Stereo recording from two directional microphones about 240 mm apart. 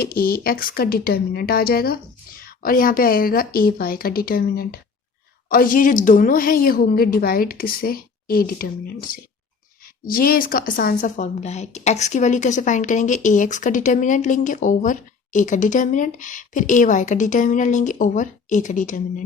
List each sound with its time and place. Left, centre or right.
0.0 s a woman's voice: left